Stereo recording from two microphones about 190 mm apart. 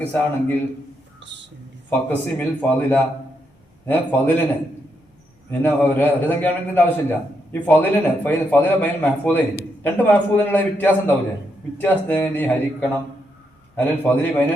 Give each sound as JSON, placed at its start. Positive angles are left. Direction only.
{"t": 0.0, "sound": "a man's voice", "side_deg": 10}
{"t": 1.2, "sound": "a sound", "side_deg": -70}
{"t": 1.9, "sound": "a man's voice", "side_deg": 10}
{"t": 5.5, "sound": "a man's voice", "side_deg": 10}